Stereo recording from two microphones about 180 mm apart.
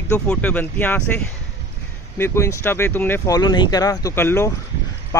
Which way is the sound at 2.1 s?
15° left (ahead or behind).